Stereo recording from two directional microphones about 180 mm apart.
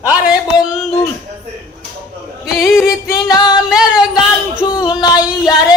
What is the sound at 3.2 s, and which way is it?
Music, 20° left (ahead or behind).